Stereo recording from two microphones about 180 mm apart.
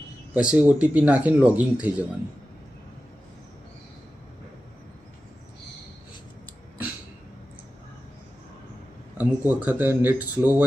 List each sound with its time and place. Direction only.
0.3 s speech: 5° right (ahead or behind)
9.1 s speech: 10° right (ahead or behind)